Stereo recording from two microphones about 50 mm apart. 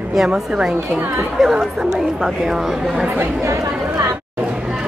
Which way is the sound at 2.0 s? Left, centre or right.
Centre.